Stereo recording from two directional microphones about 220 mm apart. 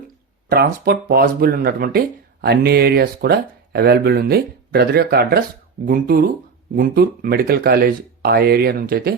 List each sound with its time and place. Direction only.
0.5 s speech: 45° right (ahead or behind)